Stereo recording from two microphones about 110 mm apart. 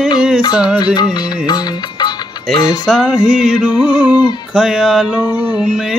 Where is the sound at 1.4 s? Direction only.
40° left (ahead or behind).